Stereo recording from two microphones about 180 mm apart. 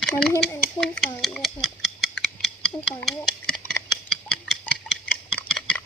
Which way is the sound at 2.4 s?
5° left (ahead or behind).